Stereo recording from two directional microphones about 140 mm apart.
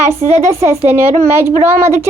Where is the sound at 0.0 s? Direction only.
20° right (ahead or behind).